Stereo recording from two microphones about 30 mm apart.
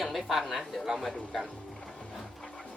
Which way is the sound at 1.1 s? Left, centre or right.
Left.